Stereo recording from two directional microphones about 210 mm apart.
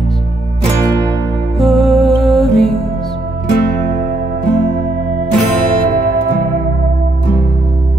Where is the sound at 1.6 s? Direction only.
Centre (ahead or behind).